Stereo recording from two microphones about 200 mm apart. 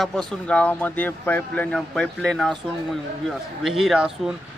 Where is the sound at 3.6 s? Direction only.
Centre (ahead or behind).